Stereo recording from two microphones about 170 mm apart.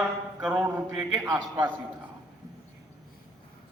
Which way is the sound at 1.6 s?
10° right (ahead or behind).